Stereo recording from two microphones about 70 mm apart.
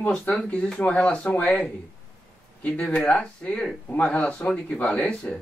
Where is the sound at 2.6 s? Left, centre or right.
Centre.